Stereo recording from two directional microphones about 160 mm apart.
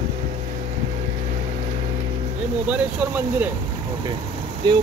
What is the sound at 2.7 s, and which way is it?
Speech, 10° right (ahead or behind).